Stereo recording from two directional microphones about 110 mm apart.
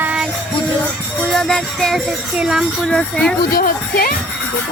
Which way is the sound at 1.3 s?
5° left (ahead or behind).